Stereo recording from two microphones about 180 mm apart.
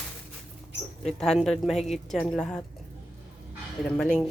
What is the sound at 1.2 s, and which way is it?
Speech, 5° left (ahead or behind).